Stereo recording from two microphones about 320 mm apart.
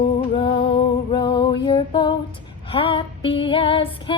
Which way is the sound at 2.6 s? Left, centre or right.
Centre.